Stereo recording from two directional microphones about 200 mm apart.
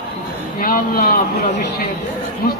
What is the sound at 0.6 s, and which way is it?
Speech, 45° left (ahead or behind).